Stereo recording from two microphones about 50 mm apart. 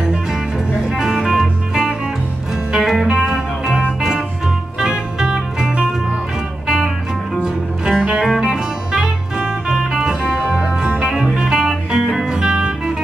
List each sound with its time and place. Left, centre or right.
0.0 s music: centre
1.7 s music: centre
7.4 s music: centre